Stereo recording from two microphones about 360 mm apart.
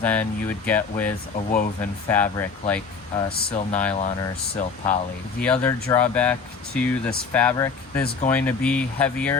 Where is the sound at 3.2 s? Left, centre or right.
Centre.